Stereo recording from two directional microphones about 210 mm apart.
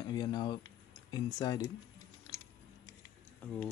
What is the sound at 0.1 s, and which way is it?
Speech, 20° left (ahead or behind).